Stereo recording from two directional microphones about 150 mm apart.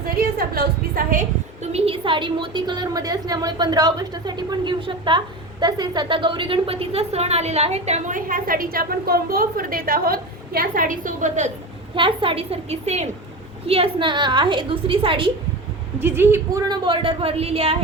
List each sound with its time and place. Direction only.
0.2 s a sound: 85° right
1.6 s a woman's voice: 45° right (ahead or behind)
11.9 s a woman's voice: 35° right (ahead or behind)
16.0 s a woman's voice: 15° right (ahead or behind)
16.6 s a woman's voice: 30° right (ahead or behind)